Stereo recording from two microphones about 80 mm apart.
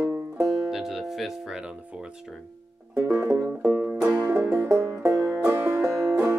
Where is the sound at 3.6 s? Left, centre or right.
Right.